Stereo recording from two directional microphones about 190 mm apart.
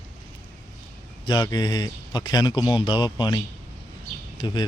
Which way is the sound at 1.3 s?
20° left (ahead or behind).